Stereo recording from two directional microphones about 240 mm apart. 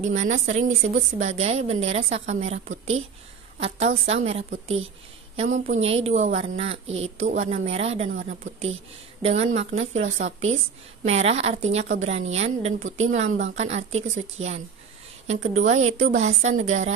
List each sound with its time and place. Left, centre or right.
0.0 s a woman's voice: right